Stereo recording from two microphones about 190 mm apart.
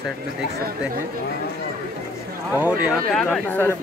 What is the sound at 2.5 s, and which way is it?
Speech, 5° right (ahead or behind).